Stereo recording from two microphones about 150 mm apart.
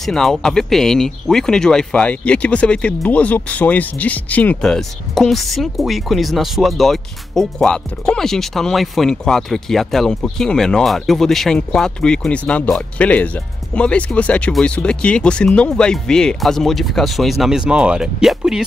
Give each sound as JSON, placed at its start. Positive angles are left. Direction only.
{"t": 0.0, "sound": "speech", "side_deg": 0}